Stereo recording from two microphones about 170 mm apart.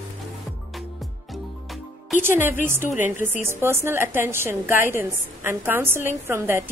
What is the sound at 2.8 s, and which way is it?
Speech, 45° left (ahead or behind).